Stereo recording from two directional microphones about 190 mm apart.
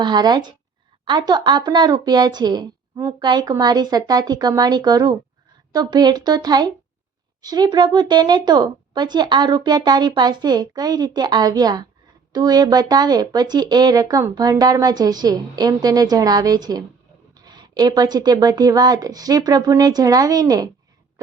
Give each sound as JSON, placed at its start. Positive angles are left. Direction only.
{"t": 0.0, "sound": "speech", "side_deg": -20}